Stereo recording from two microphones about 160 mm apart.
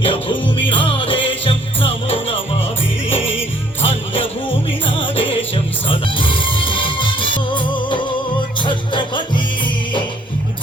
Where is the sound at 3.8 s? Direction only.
35° left (ahead or behind).